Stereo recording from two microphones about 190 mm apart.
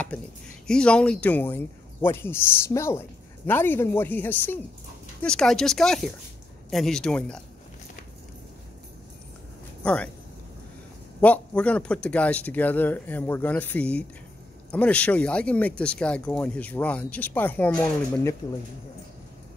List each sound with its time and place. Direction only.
0.1 s speech: 5° left (ahead or behind)
9.8 s speech: 5° left (ahead or behind)
11.1 s speech: 10° left (ahead or behind)